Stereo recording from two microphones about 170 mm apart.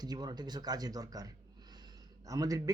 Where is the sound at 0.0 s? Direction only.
25° right (ahead or behind).